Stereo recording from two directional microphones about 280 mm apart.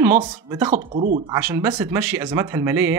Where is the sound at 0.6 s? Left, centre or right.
Right.